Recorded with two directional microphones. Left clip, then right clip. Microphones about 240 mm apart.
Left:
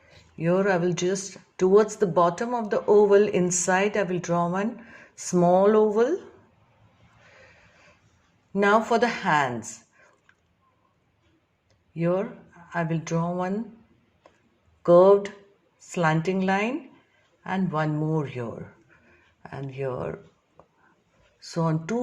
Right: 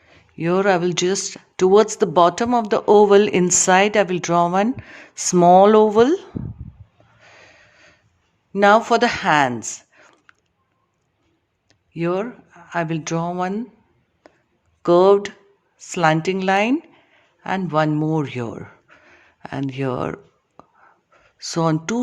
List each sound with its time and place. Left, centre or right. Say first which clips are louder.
0.3 s speech: right 5 dB; right
8.5 s speech: right 7 dB; right
11.7 s speech: right 3 dB; right
14.8 s speech: right 2 dB; right
21.3 s speech: right 8 dB; right